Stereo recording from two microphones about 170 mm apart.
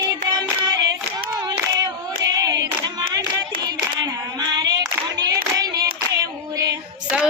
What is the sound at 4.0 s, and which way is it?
Female singing, 25° right (ahead or behind).